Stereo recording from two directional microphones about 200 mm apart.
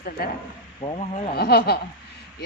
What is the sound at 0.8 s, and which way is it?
Speech, 30° left (ahead or behind).